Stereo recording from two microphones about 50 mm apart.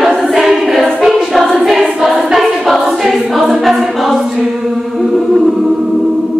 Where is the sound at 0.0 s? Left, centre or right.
Centre.